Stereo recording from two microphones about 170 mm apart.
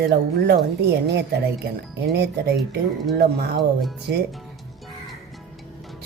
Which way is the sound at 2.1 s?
80° right.